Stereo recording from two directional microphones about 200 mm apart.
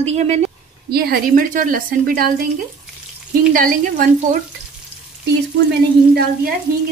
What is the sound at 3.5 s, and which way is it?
Speech, 40° right (ahead or behind).